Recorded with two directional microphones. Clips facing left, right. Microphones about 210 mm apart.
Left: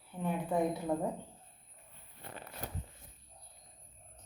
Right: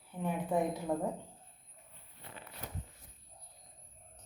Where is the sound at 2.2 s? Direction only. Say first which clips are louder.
Left 4 dB; 45° left (ahead or behind).